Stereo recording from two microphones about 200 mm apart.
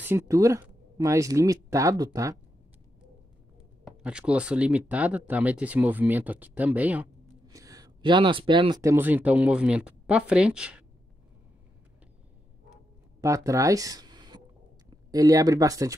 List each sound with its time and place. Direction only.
0.0 s speech: 15° right (ahead or behind)
3.8 s speech: 5° right (ahead or behind)
13.2 s speech: 15° right (ahead or behind)